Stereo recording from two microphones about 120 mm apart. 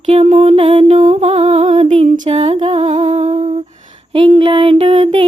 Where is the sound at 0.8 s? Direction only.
65° right (ahead or behind).